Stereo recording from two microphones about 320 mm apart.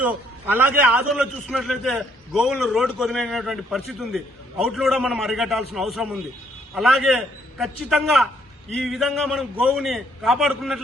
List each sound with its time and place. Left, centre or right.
0.0 s a man's voice: centre